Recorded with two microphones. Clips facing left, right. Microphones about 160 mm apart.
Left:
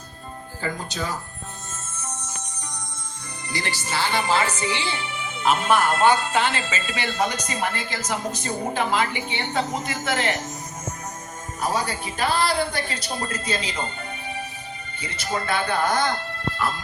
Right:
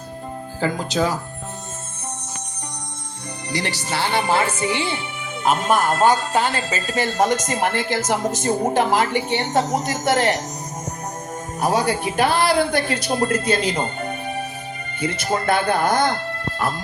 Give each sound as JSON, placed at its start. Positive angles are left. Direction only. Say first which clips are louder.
{"t": 0.6, "sound": "speech", "louder": "right 8 dB", "side_deg": -90}
{"t": 3.5, "sound": "a woman's voice", "louder": "right 3 dB", "side_deg": -70}
{"t": 11.6, "sound": "speech", "louder": "right 6 dB", "side_deg": -70}
{"t": 13.6, "sound": "music", "louder": "right 7 dB", "side_deg": -45}
{"t": 15.0, "sound": "speech", "louder": "right 7 dB", "side_deg": -50}